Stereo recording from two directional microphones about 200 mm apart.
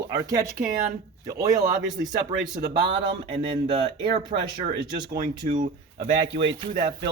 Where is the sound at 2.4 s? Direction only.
55° right (ahead or behind).